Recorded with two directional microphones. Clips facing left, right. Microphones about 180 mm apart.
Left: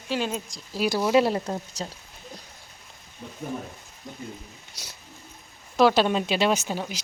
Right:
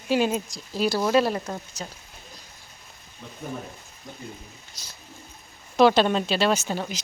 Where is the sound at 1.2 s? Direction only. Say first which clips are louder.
Left 2 dB; 25° left (ahead or behind).